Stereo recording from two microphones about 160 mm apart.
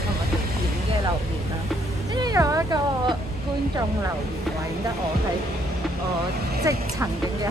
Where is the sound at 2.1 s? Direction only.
25° right (ahead or behind).